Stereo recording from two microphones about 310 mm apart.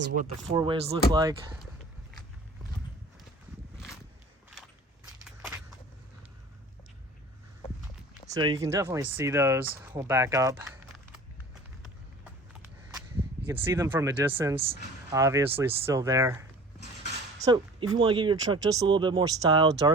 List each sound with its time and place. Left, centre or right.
0.5 s speech: centre
5.2 s biting: centre
8.3 s speech: centre
12.2 s a sound: centre
14.7 s speech: centre